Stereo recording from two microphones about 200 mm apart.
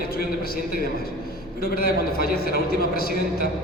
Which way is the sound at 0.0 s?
50° left (ahead or behind).